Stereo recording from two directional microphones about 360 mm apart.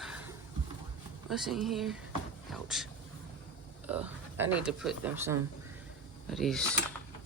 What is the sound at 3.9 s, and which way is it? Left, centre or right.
Speech, centre.